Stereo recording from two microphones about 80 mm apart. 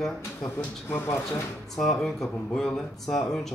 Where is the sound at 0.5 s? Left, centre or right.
Left.